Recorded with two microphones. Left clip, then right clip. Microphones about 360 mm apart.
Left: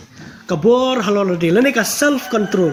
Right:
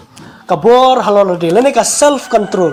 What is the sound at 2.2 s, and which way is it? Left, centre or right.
Speech, right.